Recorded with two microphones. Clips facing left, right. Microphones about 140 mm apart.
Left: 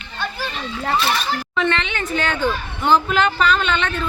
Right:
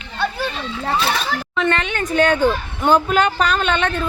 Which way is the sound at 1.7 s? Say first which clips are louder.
Right 5 dB; 45° right (ahead or behind).